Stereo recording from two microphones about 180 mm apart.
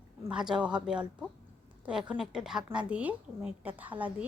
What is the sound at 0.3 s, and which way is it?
A woman's voice, 5° right (ahead or behind).